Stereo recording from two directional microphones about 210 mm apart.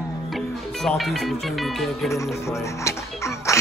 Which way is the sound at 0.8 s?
Centre (ahead or behind).